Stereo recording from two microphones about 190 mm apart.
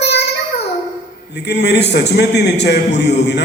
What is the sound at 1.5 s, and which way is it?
A man's voice, 60° left (ahead or behind).